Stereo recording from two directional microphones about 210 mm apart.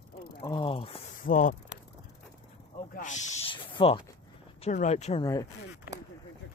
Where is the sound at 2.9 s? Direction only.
35° left (ahead or behind).